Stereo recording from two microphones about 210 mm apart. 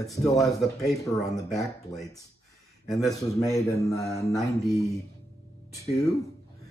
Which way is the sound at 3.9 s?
15° left (ahead or behind).